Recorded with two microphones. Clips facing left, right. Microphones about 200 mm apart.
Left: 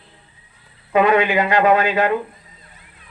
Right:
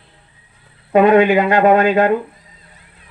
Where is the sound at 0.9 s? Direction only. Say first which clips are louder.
Right 5 dB; 50° right (ahead or behind).